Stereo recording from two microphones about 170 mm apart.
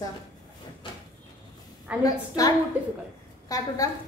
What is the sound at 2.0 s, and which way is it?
A woman's voice, 20° left (ahead or behind).